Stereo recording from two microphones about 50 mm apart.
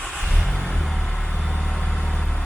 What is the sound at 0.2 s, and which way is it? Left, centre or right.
Vehicle, centre.